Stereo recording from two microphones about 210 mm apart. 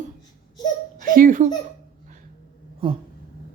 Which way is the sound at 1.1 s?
40° right (ahead or behind).